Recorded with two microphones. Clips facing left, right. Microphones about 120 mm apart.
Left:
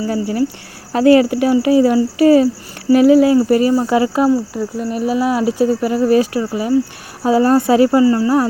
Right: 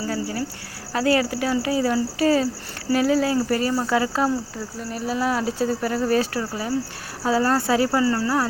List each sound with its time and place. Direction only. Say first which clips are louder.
0.1 s speech: left 9 dB; 20° left (ahead or behind)